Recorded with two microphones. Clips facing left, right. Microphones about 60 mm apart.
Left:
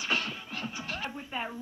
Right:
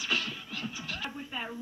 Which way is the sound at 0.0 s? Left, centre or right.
Centre.